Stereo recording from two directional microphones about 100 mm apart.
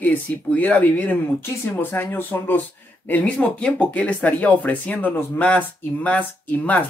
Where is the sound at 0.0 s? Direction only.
15° left (ahead or behind).